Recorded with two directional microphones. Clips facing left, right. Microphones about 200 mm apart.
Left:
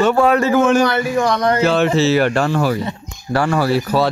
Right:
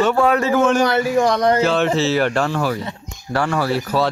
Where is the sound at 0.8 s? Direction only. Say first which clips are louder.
Even; 35° right (ahead or behind).